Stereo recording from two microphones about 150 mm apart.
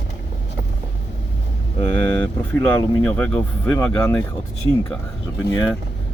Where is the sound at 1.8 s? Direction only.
15° left (ahead or behind).